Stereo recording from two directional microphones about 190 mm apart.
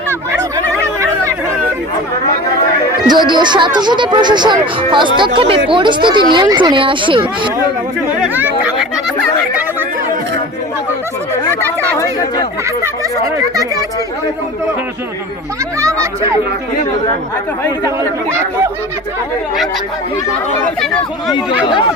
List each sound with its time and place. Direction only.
0.1 s turkey: 15° right (ahead or behind)
0.9 s chatter: 15° right (ahead or behind)
3.1 s speech: 25° right (ahead or behind)
8.2 s speech: 10° right (ahead or behind)
11.9 s speech: 20° left (ahead or behind)
12.8 s speech: 20° right (ahead or behind)
15.8 s a sound: 15° right (ahead or behind)